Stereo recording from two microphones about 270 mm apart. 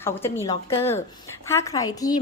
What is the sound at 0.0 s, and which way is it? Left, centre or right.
A woman's voice, centre.